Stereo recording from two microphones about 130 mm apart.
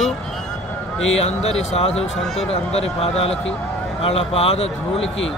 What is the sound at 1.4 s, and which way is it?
A man's voice, 55° left (ahead or behind).